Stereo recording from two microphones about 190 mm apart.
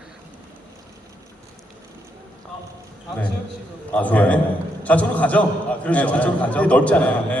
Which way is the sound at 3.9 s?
10° left (ahead or behind).